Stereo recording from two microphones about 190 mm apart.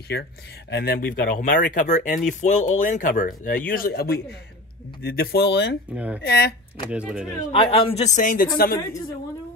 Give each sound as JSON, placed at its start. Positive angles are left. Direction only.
{"t": 0.1, "sound": "speech", "side_deg": 60}
{"t": 5.9, "sound": "speech", "side_deg": -10}
{"t": 6.2, "sound": "speech", "side_deg": 60}
{"t": 6.9, "sound": "speech", "side_deg": -5}
{"t": 7.5, "sound": "speech", "side_deg": 30}